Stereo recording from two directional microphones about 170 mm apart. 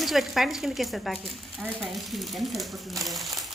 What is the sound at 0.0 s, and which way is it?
Speech, centre (ahead or behind).